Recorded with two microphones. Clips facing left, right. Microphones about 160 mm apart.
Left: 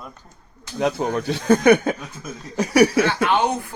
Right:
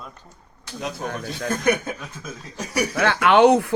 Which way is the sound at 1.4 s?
75° left (ahead or behind).